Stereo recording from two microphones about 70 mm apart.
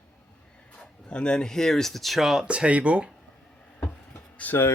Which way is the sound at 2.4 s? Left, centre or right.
Centre.